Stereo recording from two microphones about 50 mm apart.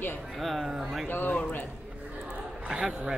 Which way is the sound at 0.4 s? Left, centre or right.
Centre.